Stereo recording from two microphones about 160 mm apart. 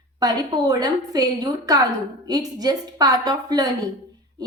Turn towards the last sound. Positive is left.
turn(degrees=-20)  # may be behind; listen again after turning